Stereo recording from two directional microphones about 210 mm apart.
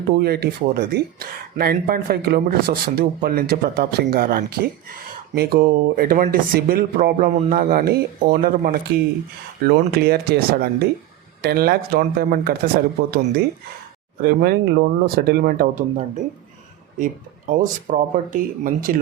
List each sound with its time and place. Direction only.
0.2 s speech: 50° right (ahead or behind)